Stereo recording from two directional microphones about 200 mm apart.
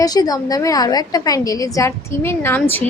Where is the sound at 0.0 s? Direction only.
20° left (ahead or behind).